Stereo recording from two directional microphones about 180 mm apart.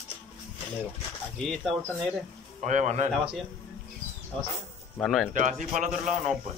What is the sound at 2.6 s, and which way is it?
Speech, 40° right (ahead or behind).